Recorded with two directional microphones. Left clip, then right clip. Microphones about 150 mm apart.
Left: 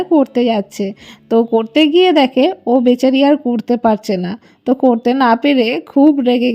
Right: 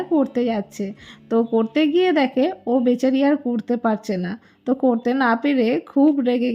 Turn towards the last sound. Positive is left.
turn(degrees=30)  # may be behind; listen again after turning